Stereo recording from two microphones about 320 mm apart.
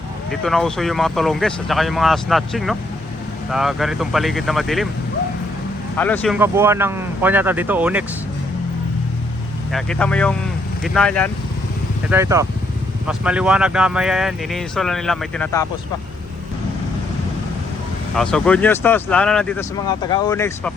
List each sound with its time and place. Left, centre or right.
0.3 s speech: centre
6.0 s speech: centre
9.7 s speech: centre
12.1 s speech: centre
18.1 s speech: centre